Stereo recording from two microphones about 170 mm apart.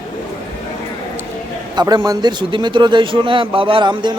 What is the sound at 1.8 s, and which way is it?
A man's voice, 25° right (ahead or behind).